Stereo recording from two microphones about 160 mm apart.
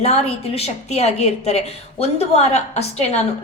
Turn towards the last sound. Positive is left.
turn(degrees=40)  # may be behind; listen again after turning